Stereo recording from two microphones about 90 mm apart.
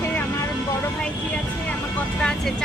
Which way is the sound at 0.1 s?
25° left (ahead or behind).